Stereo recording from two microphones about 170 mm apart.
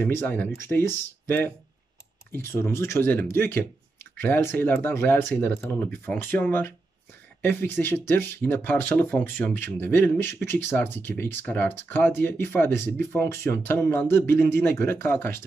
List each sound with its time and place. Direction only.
0.0 s speech: 15° left (ahead or behind)